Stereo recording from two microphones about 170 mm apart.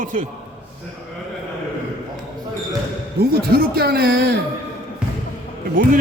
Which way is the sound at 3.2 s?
65° right (ahead or behind).